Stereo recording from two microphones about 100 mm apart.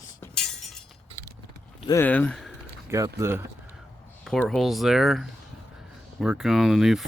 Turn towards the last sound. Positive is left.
turn(degrees=-5)  # may be behind; listen again after turning